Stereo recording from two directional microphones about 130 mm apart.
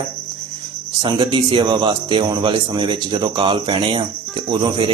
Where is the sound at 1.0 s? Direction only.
40° right (ahead or behind).